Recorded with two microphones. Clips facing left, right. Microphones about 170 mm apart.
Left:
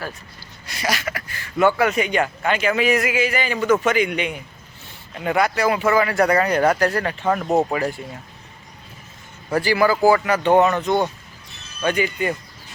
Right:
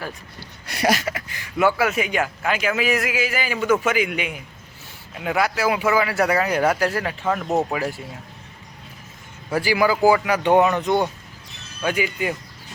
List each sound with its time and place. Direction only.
0.3 s speech: 60° right (ahead or behind)
1.0 s speech: 20° right (ahead or behind)
1.5 s a man's voice: 5° right (ahead or behind)
7.4 s speech: 15° left (ahead or behind)
7.7 s a man's voice: 5° right (ahead or behind)
9.5 s speech: 10° right (ahead or behind)